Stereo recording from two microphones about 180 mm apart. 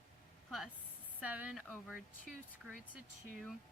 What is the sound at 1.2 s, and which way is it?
Speech, 5° right (ahead or behind).